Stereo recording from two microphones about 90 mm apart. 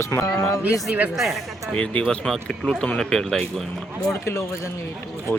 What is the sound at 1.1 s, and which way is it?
Speech, centre (ahead or behind).